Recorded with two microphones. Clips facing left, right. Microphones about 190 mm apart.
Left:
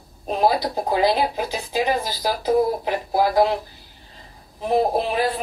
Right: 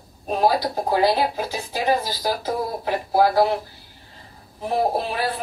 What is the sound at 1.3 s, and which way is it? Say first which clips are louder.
A man's voice: left 2 dB; 20° left (ahead or behind).